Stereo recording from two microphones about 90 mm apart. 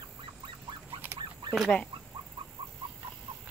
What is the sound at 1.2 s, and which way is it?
Fowl, 60° right (ahead or behind).